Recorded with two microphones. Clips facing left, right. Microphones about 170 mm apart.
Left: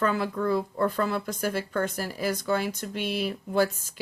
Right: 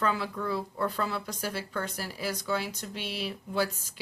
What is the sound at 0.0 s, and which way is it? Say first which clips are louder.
Speech: left 4 dB; 50° left (ahead or behind).